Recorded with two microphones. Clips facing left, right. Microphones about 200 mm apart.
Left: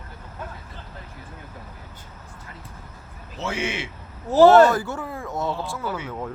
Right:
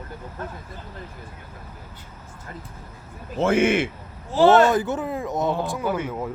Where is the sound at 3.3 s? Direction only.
50° right (ahead or behind).